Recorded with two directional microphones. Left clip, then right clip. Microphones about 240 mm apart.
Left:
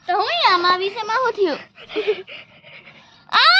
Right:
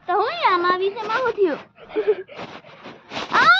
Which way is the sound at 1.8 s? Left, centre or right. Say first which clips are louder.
Right 2 dB; left.